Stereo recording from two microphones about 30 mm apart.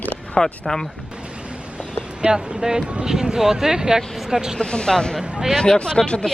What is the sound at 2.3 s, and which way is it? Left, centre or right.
Speech, right.